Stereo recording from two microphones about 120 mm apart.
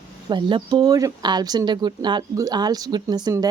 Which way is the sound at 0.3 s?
40° right (ahead or behind).